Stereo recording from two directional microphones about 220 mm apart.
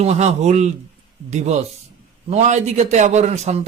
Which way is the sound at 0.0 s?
30° right (ahead or behind).